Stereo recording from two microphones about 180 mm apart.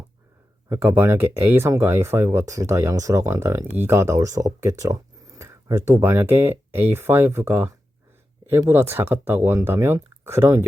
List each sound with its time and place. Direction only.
0.7 s speech: 15° right (ahead or behind)